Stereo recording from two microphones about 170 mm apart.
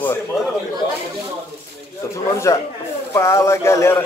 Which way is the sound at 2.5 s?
20° left (ahead or behind).